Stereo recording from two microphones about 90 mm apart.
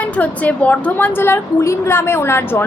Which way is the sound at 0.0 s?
15° left (ahead or behind).